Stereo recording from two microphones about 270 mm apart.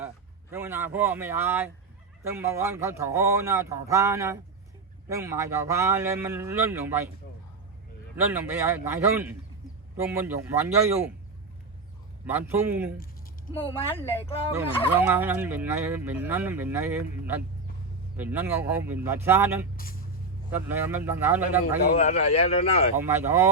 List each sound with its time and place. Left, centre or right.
0.5 s fowl: centre
8.1 s fowl: centre
12.2 s fowl: centre
13.9 s speech: left
14.5 s fowl: centre
19.7 s speech: left
20.5 s fowl: centre
21.9 s speech: left
23.0 s fowl: centre